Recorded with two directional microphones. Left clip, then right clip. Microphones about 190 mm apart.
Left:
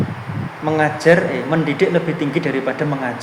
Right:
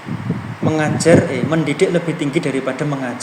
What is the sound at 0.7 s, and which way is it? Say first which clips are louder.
Speech: even; 30° right (ahead or behind).